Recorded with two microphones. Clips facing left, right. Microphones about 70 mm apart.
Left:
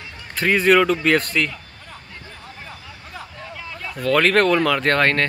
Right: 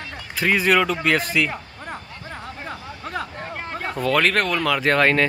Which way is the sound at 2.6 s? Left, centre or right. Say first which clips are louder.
Right 6 dB; right.